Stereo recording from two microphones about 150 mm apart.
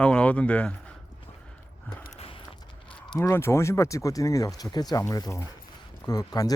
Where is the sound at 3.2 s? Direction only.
15° left (ahead or behind).